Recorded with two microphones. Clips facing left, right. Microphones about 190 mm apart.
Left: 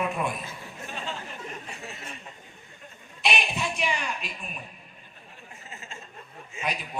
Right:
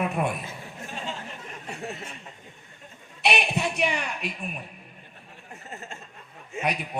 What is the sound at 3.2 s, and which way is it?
A man's voice, 65° right (ahead or behind).